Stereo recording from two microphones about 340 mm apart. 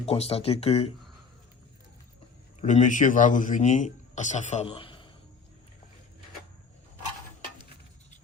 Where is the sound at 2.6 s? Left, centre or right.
Left.